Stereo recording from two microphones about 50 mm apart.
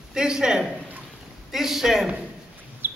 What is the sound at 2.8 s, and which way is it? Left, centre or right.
Bird, right.